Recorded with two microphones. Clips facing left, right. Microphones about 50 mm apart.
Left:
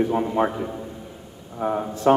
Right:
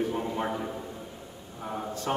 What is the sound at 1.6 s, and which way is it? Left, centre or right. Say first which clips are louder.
Speech: left 11 dB; left.